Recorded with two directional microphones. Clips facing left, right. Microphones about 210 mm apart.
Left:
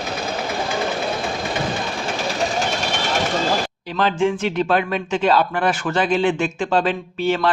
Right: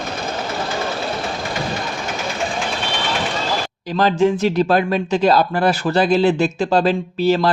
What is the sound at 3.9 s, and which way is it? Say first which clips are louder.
Speech: right 3 dB; 40° right (ahead or behind).